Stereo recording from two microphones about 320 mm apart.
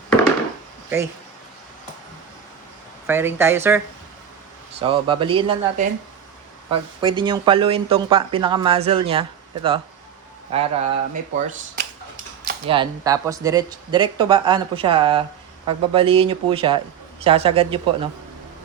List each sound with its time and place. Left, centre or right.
3.1 s speech: centre
4.8 s speech: centre